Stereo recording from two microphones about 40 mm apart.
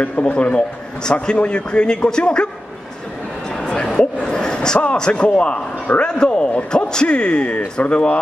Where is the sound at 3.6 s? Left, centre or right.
Centre.